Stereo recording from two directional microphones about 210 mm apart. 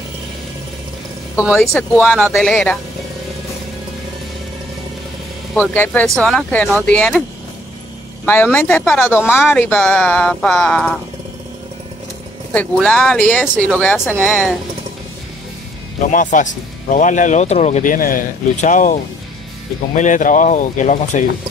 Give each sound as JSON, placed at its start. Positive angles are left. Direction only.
{"t": 1.3, "sound": "speech", "side_deg": 5}
{"t": 5.6, "sound": "speech", "side_deg": 10}
{"t": 8.3, "sound": "speech", "side_deg": 10}
{"t": 12.5, "sound": "speech", "side_deg": 5}
{"t": 16.1, "sound": "speech", "side_deg": 35}